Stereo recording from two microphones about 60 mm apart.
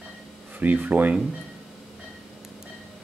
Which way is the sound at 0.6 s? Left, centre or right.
Right.